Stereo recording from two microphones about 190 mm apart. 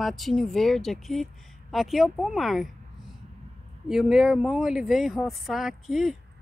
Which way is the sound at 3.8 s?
Centre (ahead or behind).